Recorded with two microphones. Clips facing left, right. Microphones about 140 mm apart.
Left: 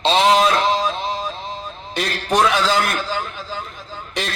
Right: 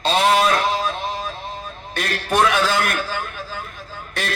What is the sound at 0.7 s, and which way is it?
Music, 55° right (ahead or behind).